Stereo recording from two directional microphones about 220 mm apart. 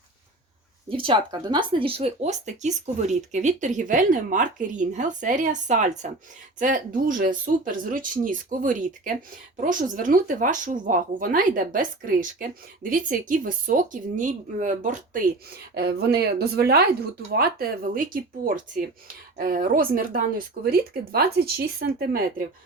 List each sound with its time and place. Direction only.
0.9 s a woman's voice: 25° right (ahead or behind); by 22.4 s 40° right (ahead or behind)